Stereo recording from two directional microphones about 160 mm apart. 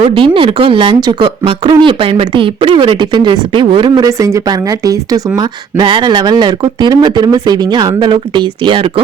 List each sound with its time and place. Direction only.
0.0 s speech: 30° right (ahead or behind)